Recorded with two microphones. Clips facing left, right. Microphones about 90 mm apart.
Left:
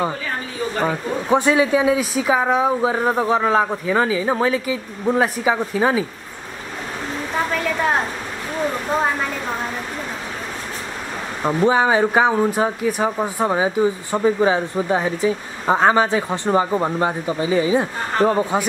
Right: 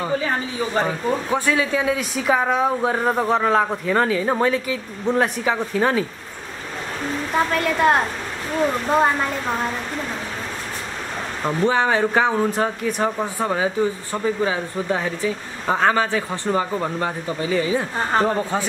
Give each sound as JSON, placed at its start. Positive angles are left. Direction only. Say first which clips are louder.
{"t": 1.3, "sound": "speech", "louder": "left 8 dB", "side_deg": 20}
{"t": 7.5, "sound": "speech", "louder": "right 3 dB", "side_deg": 0}
{"t": 11.4, "sound": "speech", "louder": "left 3 dB", "side_deg": 15}